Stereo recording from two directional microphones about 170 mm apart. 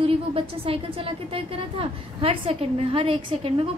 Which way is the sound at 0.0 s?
35° right (ahead or behind).